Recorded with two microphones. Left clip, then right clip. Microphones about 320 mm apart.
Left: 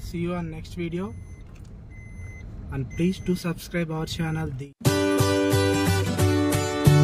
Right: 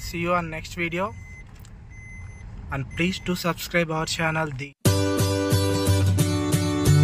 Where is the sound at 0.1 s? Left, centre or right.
Right.